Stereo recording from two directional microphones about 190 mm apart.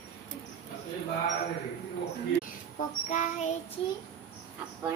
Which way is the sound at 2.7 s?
40° left (ahead or behind).